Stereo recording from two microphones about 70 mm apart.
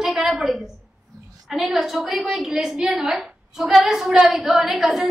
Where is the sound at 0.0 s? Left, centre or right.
Centre.